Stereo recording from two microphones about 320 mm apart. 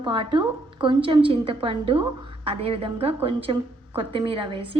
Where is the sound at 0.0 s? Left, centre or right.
Centre.